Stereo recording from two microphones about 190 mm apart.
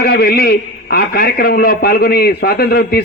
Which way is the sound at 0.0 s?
55° left (ahead or behind).